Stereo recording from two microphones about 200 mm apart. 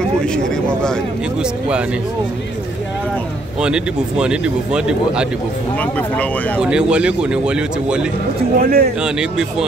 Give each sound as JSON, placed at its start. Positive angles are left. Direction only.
{"t": 3.6, "sound": "speech", "side_deg": -5}
{"t": 5.8, "sound": "speech", "side_deg": 5}
{"t": 6.6, "sound": "speech", "side_deg": -5}
{"t": 8.5, "sound": "speech", "side_deg": -45}
{"t": 9.0, "sound": "speech", "side_deg": -5}